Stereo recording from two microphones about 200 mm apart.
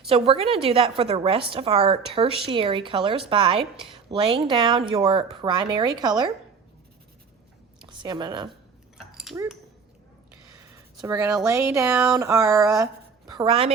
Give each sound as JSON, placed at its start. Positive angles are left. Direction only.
{"t": 0.1, "sound": "a woman's voice", "side_deg": -30}
{"t": 8.0, "sound": "a woman's voice", "side_deg": -20}
{"t": 11.0, "sound": "speech", "side_deg": -15}
{"t": 13.3, "sound": "a woman's voice", "side_deg": -25}